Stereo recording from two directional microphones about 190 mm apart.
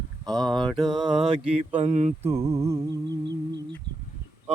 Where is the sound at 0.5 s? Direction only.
25° right (ahead or behind).